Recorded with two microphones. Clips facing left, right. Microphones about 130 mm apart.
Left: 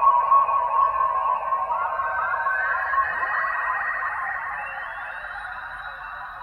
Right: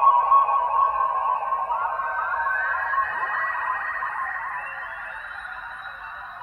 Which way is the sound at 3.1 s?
10° right (ahead or behind).